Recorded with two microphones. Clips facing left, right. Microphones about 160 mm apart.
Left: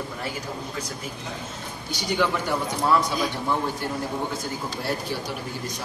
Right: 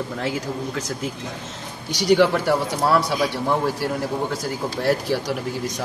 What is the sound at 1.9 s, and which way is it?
Speech, 85° right.